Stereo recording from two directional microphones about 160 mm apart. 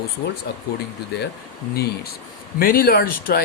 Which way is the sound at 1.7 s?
80° left.